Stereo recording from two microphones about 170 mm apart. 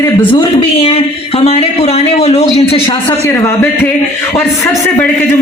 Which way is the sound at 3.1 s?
15° left (ahead or behind).